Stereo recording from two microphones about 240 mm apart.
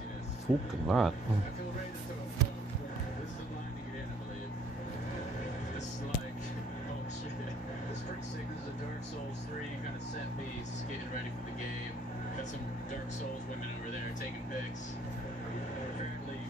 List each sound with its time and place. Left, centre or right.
0.5 s speech: centre